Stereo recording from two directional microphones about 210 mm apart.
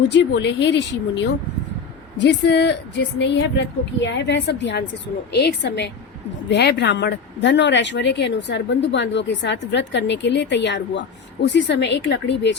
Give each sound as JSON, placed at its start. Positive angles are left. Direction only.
{"t": 0.1, "sound": "a woman's voice", "side_deg": 55}